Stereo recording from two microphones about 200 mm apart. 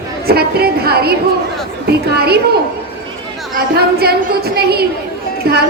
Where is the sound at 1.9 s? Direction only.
50° right (ahead or behind).